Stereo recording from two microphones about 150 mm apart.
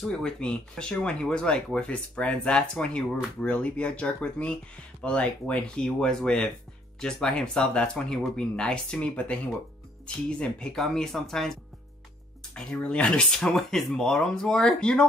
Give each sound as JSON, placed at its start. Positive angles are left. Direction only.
{"t": 0.0, "sound": "speech", "side_deg": 5}
{"t": 10.4, "sound": "speech", "side_deg": 5}
{"t": 12.5, "sound": "speech", "side_deg": 5}